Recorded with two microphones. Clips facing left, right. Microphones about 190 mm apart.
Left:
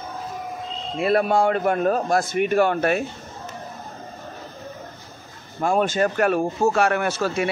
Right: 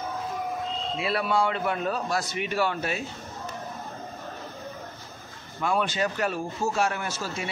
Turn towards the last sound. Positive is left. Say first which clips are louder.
# left 10 dB
turn(degrees=65)  # may be behind; listen again after turning